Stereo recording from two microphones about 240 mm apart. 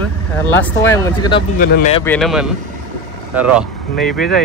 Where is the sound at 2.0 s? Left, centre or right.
Centre.